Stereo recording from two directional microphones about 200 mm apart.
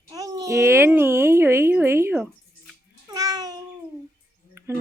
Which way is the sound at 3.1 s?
15° right (ahead or behind).